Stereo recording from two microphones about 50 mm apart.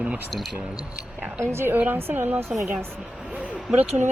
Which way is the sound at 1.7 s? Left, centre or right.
Right.